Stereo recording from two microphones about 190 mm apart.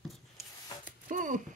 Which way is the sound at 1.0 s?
45° right (ahead or behind).